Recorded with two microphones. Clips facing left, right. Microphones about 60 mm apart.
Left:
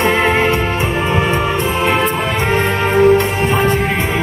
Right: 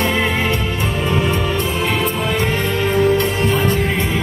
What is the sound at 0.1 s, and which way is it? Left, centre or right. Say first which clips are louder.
Music: left 5 dB; left.